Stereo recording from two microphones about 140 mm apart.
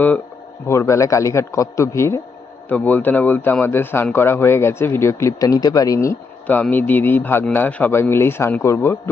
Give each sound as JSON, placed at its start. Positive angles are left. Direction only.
{"t": 0.7, "sound": "a man's voice", "side_deg": 20}